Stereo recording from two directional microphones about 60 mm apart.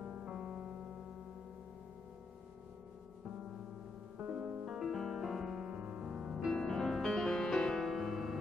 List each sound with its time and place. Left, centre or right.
0.0 s music: centre
4.2 s music: right
4.7 s music: centre
6.5 s music: centre